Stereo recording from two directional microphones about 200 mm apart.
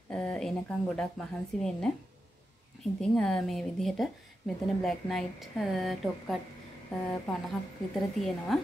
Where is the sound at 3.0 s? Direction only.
5° left (ahead or behind).